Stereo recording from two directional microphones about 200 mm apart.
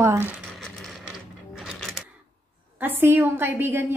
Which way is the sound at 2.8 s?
10° right (ahead or behind).